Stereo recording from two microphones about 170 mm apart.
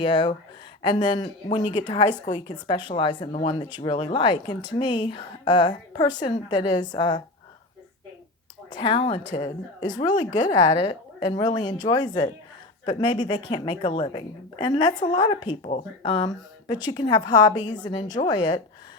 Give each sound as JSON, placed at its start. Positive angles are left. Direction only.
{"t": 0.0, "sound": "speech", "side_deg": 30}
{"t": 8.7, "sound": "speech", "side_deg": 30}
{"t": 15.6, "sound": "speech", "side_deg": 40}
{"t": 16.2, "sound": "speech", "side_deg": 25}